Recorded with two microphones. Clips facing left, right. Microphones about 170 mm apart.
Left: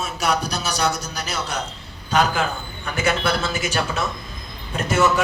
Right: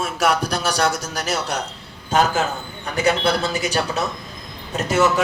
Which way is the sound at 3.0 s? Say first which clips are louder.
Right 3 dB; 35° right (ahead or behind).